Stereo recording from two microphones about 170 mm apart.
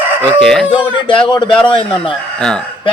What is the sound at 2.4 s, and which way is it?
Speech, 5° left (ahead or behind).